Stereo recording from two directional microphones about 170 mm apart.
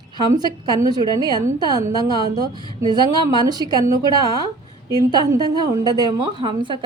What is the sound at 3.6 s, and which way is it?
Speech, 25° left (ahead or behind).